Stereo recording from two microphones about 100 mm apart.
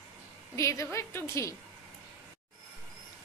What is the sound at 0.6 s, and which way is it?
Speech, 30° left (ahead or behind).